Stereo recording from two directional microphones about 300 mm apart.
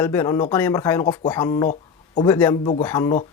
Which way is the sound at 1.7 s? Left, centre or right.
Left.